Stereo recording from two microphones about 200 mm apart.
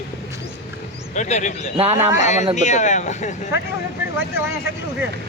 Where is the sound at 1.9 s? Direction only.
10° right (ahead or behind).